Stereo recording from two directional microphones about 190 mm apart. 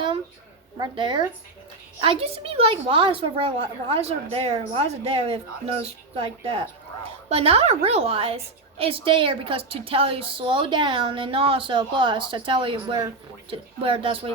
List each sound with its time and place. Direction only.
0.8 s a woman's voice: 25° right (ahead or behind)